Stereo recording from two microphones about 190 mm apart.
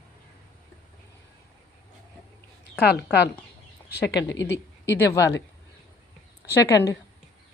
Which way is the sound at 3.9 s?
65° left (ahead or behind).